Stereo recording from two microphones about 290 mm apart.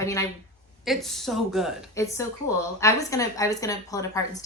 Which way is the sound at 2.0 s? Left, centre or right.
Centre.